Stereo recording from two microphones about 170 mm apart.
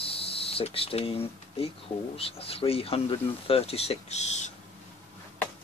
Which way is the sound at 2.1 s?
35° left (ahead or behind).